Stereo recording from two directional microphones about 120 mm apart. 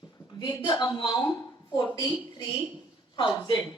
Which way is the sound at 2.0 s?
45° left (ahead or behind).